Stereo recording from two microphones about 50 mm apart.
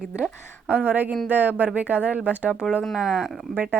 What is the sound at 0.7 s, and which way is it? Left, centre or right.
Speech, right.